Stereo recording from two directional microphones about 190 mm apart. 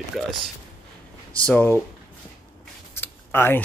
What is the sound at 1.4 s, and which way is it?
Speech, 10° left (ahead or behind).